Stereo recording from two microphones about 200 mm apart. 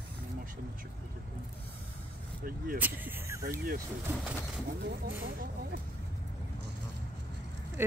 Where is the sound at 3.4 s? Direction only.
50° right (ahead or behind).